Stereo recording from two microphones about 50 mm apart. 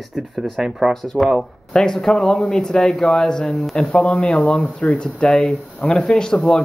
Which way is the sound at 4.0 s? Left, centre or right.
Left.